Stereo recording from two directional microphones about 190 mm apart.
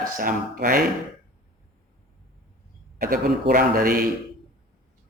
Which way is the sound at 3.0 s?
50° right (ahead or behind).